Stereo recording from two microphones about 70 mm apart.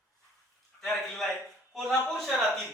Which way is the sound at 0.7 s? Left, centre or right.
Left.